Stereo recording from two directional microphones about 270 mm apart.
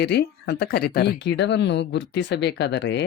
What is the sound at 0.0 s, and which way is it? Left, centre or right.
Speech, left.